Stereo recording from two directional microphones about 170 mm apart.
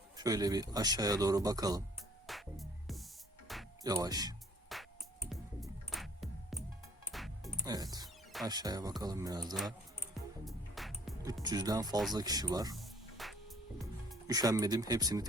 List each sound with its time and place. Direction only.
0.2 s speech: 20° right (ahead or behind)
2.2 s music: centre (ahead or behind)
3.8 s speech: 20° right (ahead or behind)
4.7 s music: centre (ahead or behind)
7.1 s music: centre (ahead or behind)
7.6 s speech: 20° right (ahead or behind)
8.0 s music: centre (ahead or behind)
8.4 s speech: 25° right (ahead or behind)
10.4 s music: centre (ahead or behind)
11.4 s speech: 25° right (ahead or behind)
12.7 s music: centre (ahead or behind)
14.3 s speech: 20° right (ahead or behind)